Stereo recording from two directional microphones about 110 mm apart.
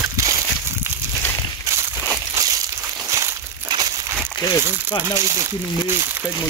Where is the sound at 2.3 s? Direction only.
35° right (ahead or behind).